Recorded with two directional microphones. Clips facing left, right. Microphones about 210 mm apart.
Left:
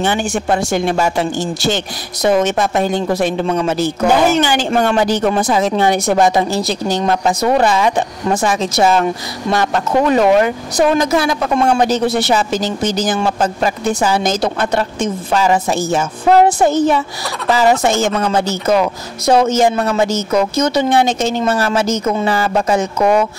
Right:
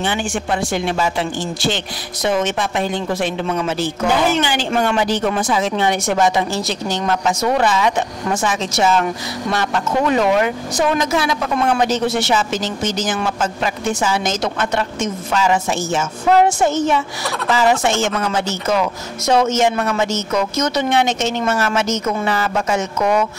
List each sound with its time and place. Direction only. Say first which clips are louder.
0.0 s speech: left 4 dB; 40° left (ahead or behind)